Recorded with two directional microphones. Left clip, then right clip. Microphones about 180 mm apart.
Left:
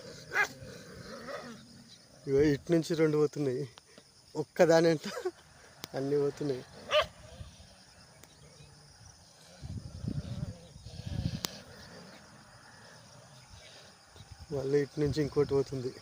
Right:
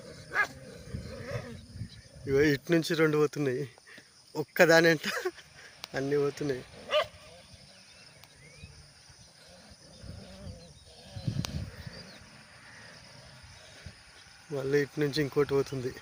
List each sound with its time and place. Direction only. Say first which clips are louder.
0.0 s dog: right 1 dB; 10° left (ahead or behind)
2.2 s speech: right 1 dB; 5° left (ahead or behind)
14.5 s speech: right 1 dB; 5° left (ahead or behind)